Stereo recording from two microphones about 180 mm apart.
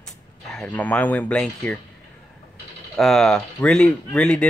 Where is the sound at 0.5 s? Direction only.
5° left (ahead or behind).